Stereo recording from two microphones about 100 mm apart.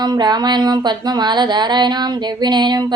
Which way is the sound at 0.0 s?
45° right (ahead or behind).